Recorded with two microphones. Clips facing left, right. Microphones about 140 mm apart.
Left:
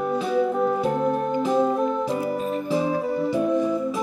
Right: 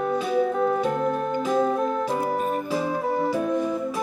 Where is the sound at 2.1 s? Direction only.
50° right (ahead or behind).